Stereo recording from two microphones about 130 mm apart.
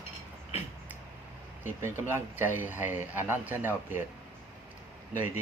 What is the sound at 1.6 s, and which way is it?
A man's voice, 20° right (ahead or behind).